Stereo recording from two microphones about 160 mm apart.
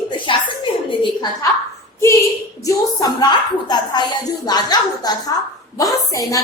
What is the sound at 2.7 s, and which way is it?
A woman's voice, 25° left (ahead or behind).